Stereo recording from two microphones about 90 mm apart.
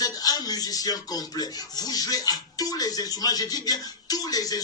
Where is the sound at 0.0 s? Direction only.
45° left (ahead or behind).